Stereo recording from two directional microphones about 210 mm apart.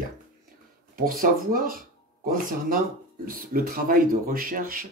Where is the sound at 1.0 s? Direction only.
40° right (ahead or behind).